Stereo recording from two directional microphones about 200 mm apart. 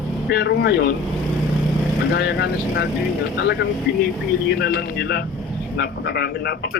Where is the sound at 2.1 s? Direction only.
60° left (ahead or behind).